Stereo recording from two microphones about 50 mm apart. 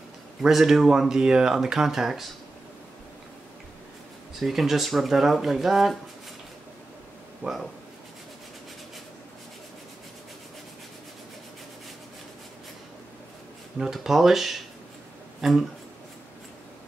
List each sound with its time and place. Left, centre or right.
0.4 s speech: centre
4.4 s speech: centre
7.4 s speech: right
14.0 s speech: centre